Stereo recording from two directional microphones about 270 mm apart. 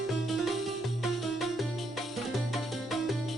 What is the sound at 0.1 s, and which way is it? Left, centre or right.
Music, centre.